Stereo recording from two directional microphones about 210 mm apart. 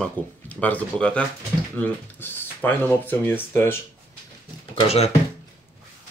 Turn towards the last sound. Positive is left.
turn(degrees=30)  # may be behind; listen again after turning